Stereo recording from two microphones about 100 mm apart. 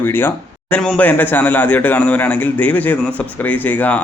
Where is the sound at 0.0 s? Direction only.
20° left (ahead or behind).